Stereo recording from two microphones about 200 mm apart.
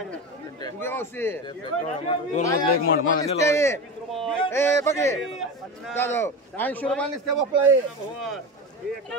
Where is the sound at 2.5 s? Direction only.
45° left (ahead or behind).